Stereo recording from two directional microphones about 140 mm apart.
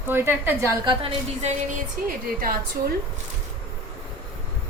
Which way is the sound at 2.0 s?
90° right.